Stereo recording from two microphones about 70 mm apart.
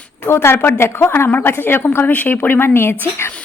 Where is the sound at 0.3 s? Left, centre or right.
Left.